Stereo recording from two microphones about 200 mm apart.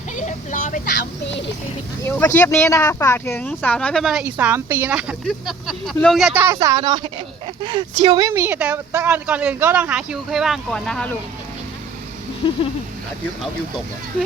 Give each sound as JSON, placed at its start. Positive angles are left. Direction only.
{"t": 0.2, "sound": "vehicle", "side_deg": 40}
{"t": 2.0, "sound": "speech", "side_deg": 10}
{"t": 12.4, "sound": "a sound", "side_deg": 25}